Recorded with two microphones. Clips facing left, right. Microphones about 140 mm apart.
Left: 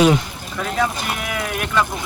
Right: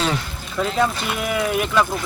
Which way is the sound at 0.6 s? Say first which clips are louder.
Right 2 dB; centre (ahead or behind).